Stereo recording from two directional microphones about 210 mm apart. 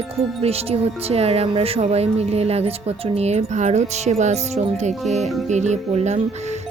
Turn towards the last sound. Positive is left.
turn(degrees=-30)  # may be behind; listen again after turning